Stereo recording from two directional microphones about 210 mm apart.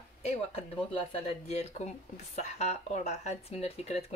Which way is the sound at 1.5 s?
30° left (ahead or behind).